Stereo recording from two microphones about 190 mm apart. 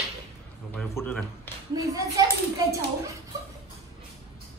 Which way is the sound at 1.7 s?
20° right (ahead or behind).